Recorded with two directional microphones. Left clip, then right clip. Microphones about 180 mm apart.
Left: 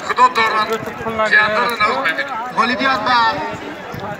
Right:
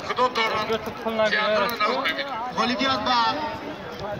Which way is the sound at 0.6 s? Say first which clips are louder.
Left 5 dB; 45° right (ahead or behind).